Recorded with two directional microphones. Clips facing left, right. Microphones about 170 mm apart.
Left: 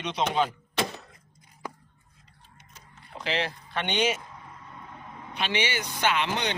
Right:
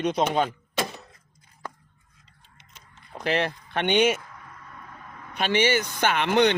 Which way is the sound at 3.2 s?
50° right (ahead or behind).